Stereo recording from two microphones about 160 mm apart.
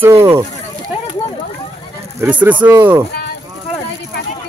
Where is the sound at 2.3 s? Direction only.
10° right (ahead or behind).